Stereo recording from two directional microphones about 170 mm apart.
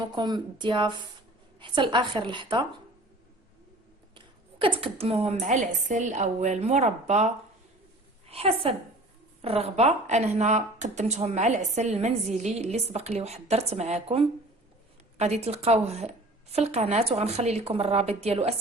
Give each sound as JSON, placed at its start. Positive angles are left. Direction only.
{"t": 0.1, "sound": "a woman's voice", "side_deg": -25}
{"t": 4.6, "sound": "a woman's voice", "side_deg": -35}